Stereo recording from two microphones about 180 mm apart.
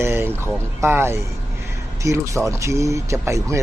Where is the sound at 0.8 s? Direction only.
15° right (ahead or behind).